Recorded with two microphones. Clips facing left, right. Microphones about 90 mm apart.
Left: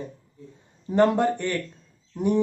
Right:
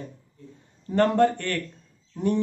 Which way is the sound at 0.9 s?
15° left (ahead or behind).